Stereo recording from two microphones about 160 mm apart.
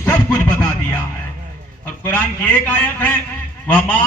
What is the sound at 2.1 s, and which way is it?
A man's voice, 10° left (ahead or behind).